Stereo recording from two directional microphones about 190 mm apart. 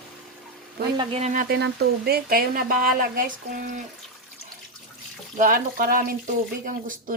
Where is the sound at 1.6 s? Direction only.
55° right (ahead or behind).